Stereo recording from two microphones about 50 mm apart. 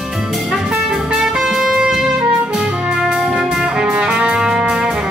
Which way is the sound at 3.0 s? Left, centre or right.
Centre.